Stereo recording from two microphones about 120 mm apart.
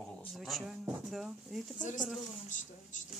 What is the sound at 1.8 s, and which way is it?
Speech, 90° left.